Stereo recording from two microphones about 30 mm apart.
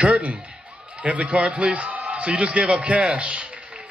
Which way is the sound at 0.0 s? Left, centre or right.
Right.